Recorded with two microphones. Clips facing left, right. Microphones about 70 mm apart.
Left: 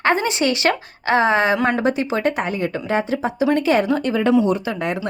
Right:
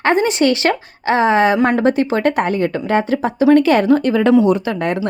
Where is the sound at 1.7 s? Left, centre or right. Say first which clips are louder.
Right 4 dB; right.